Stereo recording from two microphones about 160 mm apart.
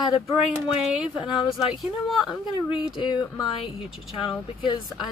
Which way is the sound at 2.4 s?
30° left (ahead or behind).